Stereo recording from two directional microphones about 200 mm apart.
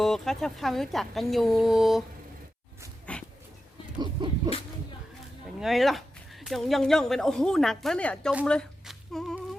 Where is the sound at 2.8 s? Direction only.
15° right (ahead or behind).